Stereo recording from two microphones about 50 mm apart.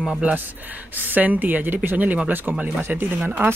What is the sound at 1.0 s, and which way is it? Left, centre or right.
Speech, right.